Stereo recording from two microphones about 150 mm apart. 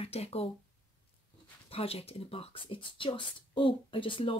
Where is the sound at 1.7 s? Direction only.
40° left (ahead or behind).